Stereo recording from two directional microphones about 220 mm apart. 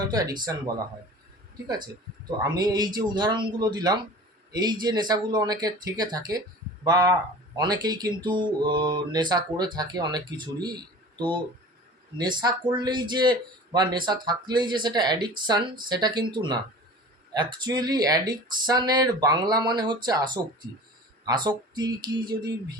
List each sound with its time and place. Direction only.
0.1 s speech: 15° right (ahead or behind)
1.6 s speech: 20° right (ahead or behind)
12.1 s speech: 20° right (ahead or behind)